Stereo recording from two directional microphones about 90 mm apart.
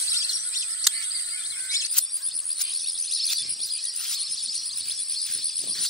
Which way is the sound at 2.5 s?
Centre (ahead or behind).